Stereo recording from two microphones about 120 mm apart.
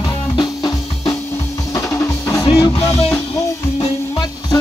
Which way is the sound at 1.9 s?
25° left (ahead or behind).